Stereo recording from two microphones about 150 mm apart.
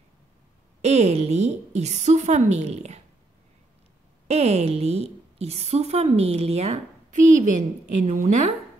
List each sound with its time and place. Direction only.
0.8 s a woman's voice: 45° right (ahead or behind)
4.3 s a woman's voice: 45° right (ahead or behind)